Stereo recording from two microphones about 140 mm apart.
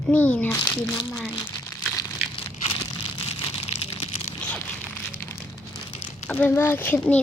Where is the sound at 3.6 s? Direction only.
45° left (ahead or behind).